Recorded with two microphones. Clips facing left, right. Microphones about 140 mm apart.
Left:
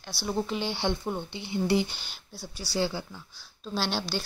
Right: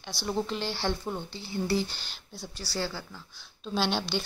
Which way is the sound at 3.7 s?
5° left (ahead or behind).